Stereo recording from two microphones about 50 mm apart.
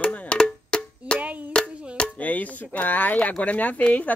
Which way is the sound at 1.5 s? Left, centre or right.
Left.